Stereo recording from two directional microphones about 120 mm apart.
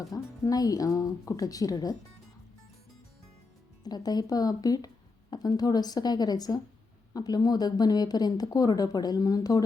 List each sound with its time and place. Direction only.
0.1 s speech: 30° left (ahead or behind)
3.8 s speech: 35° left (ahead or behind)